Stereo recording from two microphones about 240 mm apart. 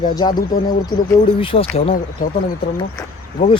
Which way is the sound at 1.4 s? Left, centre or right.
Left.